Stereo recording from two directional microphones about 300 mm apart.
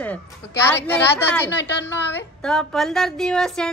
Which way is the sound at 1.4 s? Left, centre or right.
Left.